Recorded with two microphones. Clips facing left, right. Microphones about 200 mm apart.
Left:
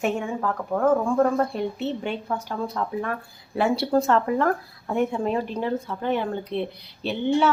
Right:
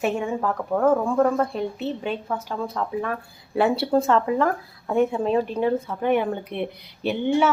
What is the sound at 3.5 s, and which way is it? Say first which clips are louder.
Speech: right 2 dB; 30° right (ahead or behind).